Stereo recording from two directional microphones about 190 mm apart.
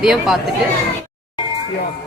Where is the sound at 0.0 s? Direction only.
5° right (ahead or behind).